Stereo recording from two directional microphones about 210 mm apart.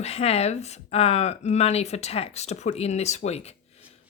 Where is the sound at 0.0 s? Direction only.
30° left (ahead or behind).